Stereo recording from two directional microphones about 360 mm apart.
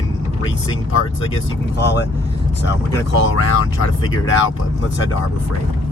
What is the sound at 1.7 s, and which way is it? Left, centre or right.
Speech, left.